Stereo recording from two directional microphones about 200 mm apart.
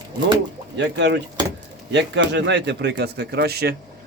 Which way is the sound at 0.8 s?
60° right (ahead or behind).